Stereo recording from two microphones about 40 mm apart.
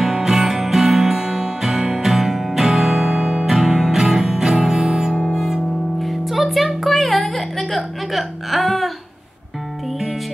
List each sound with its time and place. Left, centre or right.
0.0 s music: centre
5.9 s music: centre